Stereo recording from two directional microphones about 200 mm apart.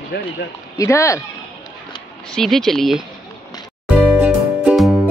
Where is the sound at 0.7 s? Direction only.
15° left (ahead or behind).